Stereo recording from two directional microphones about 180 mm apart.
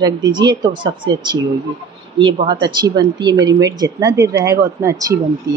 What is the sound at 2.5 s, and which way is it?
Speech, 25° right (ahead or behind).